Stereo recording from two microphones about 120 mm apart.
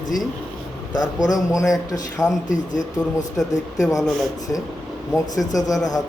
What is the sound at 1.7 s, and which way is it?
Speech, 30° left (ahead or behind).